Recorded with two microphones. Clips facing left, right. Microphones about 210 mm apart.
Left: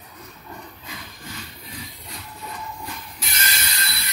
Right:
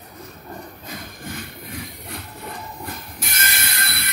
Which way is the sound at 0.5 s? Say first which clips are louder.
Right 4 dB; 45° right (ahead or behind).